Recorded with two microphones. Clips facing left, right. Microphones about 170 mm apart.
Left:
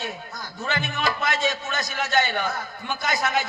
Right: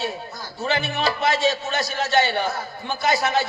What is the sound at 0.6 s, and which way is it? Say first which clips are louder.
Music: right 5 dB; 30° right (ahead or behind).